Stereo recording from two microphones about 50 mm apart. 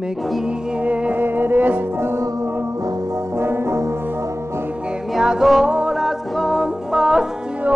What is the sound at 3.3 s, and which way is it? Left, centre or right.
Brass instrument, right.